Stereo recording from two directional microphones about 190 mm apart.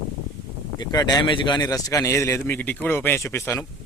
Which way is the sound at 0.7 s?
20° left (ahead or behind).